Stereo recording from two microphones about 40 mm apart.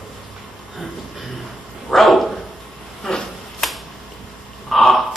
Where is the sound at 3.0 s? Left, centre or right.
Centre.